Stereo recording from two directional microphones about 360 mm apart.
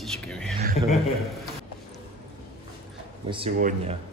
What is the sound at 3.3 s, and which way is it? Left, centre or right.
Speech, centre.